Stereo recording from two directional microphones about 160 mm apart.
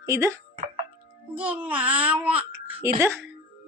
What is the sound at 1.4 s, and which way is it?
A child's voice, 10° right (ahead or behind).